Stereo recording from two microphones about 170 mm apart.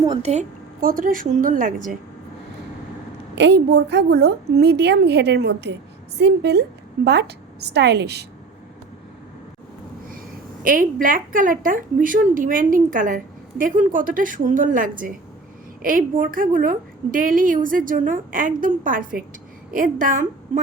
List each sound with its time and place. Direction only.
0.2 s a woman's voice: 40° right (ahead or behind)
0.8 s a woman's voice: 55° right (ahead or behind)
3.3 s a woman's voice: 85° right
10.6 s a woman's voice: 55° right (ahead or behind)